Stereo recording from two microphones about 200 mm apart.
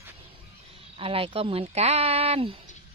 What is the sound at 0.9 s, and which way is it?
Speech, 30° right (ahead or behind).